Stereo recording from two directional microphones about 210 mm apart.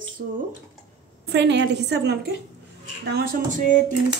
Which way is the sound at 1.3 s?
55° right (ahead or behind).